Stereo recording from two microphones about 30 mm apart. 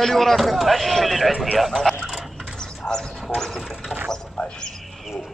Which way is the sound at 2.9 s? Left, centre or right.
Left.